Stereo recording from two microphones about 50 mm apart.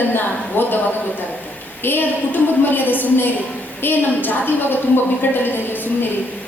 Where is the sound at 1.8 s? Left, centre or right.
Left.